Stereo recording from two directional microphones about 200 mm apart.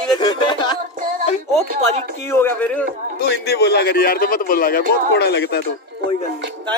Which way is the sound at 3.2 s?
55° left (ahead or behind).